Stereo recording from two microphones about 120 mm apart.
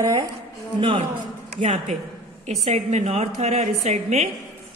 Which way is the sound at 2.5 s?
65° right (ahead or behind).